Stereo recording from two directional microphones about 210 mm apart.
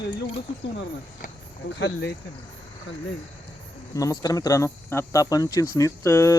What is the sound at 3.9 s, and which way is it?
Speech, 15° left (ahead or behind).